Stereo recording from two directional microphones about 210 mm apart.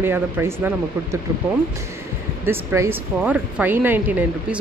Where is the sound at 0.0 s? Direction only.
10° right (ahead or behind).